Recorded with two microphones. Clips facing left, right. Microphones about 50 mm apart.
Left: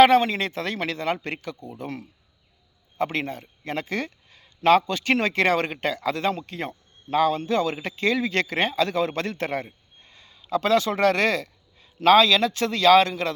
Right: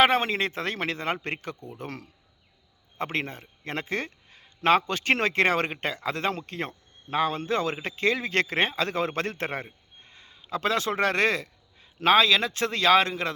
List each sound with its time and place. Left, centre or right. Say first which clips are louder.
0.0 s speech: left 5 dB; right
1.8 s speech: left 5 dB; right
3.0 s speech: left 4 dB; right